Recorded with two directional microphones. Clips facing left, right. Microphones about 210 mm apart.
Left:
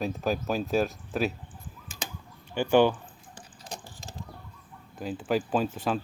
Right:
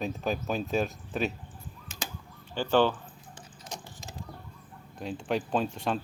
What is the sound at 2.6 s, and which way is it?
Speech, 15° left (ahead or behind).